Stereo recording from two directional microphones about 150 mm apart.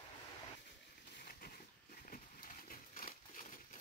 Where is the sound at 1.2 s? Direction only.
85° left.